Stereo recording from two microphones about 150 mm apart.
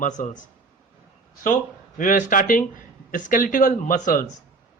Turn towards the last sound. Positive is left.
turn(degrees=60)  # may be behind; listen again after turning